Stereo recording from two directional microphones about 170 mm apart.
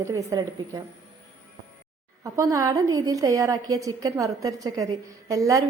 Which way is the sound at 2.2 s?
20° right (ahead or behind).